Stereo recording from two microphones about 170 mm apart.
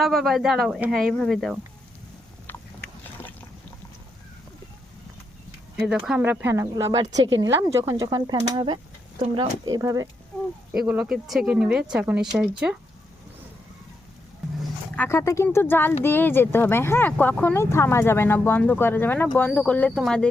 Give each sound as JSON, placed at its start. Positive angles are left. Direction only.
{"t": 0.0, "sound": "speech", "side_deg": 0}
{"t": 2.5, "sound": "boat", "side_deg": 10}
{"t": 5.9, "sound": "speech", "side_deg": -5}
{"t": 10.7, "sound": "speech", "side_deg": -10}
{"t": 14.9, "sound": "speech", "side_deg": 15}